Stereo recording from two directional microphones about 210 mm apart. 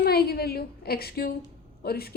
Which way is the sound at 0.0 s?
45° left (ahead or behind).